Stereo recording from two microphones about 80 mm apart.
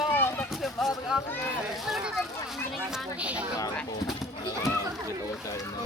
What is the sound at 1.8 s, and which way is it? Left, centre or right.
Speech, centre.